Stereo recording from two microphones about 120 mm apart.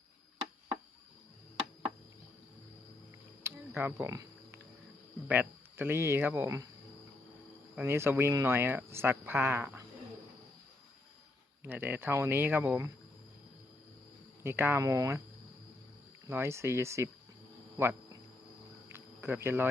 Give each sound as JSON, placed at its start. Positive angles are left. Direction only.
{"t": 3.4, "sound": "cricket", "side_deg": -20}
{"t": 3.8, "sound": "speech", "side_deg": -20}
{"t": 7.8, "sound": "speech", "side_deg": -20}
{"t": 11.6, "sound": "speech", "side_deg": -15}
{"t": 14.4, "sound": "speech", "side_deg": -20}
{"t": 16.2, "sound": "speech", "side_deg": -25}
{"t": 17.7, "sound": "cricket", "side_deg": -20}